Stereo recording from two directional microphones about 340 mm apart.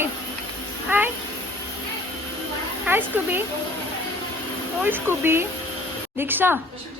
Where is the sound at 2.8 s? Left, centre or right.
Centre.